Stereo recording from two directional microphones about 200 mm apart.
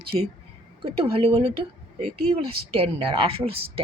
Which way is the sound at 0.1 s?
30° right (ahead or behind).